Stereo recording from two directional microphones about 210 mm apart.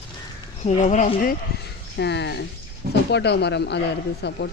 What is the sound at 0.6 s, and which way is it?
Speech, 35° left (ahead or behind).